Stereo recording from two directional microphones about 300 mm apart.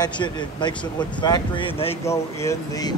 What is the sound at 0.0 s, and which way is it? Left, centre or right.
Speech, centre.